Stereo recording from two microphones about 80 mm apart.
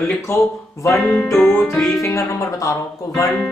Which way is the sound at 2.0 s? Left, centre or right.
Left.